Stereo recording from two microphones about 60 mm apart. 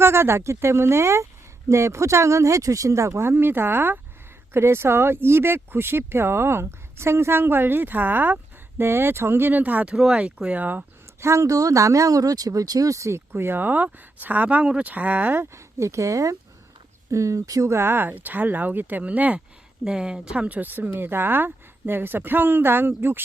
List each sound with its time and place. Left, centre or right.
0.0 s speech: right
9.9 s speech: centre
11.2 s speech: right
15.4 s speech: right
17.7 s speech: right
19.8 s speech: centre; by 23.2 s right